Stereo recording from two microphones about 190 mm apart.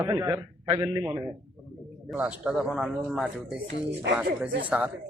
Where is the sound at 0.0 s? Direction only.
15° right (ahead or behind).